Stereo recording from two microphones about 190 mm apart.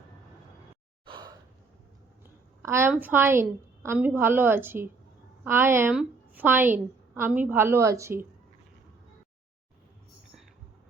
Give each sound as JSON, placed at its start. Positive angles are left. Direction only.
{"t": 1.0, "sound": "gasp", "side_deg": -25}
{"t": 2.6, "sound": "a woman's voice", "side_deg": -15}